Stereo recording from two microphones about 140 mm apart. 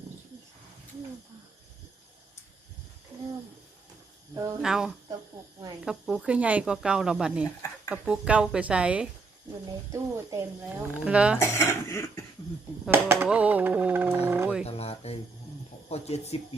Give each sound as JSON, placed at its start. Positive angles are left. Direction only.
{"t": 4.6, "sound": "speech", "side_deg": -5}
{"t": 9.9, "sound": "speech", "side_deg": -20}
{"t": 10.6, "sound": "speech", "side_deg": -10}
{"t": 11.3, "sound": "speech", "side_deg": 20}
{"t": 12.9, "sound": "speech", "side_deg": -15}
{"t": 13.2, "sound": "music", "side_deg": -10}
{"t": 14.6, "sound": "a sound", "side_deg": 45}
{"t": 15.9, "sound": "speech", "side_deg": 50}